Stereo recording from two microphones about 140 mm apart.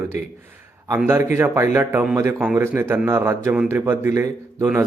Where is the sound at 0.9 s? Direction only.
15° right (ahead or behind).